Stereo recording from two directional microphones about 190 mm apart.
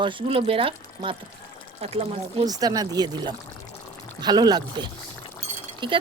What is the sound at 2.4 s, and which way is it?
Speech, 20° right (ahead or behind).